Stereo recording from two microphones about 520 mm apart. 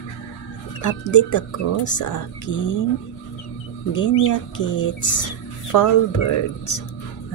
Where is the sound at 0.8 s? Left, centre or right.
Left.